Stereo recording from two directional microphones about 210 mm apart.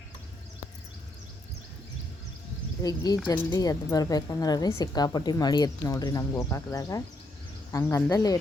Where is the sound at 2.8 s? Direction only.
15° left (ahead or behind).